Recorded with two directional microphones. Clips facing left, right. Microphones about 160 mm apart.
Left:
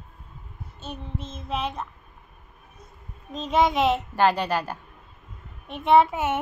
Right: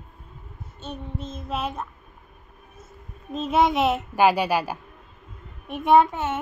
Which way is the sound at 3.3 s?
5° right (ahead or behind).